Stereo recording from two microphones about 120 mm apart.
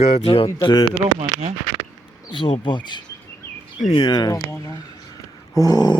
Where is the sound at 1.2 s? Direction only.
55° right (ahead or behind).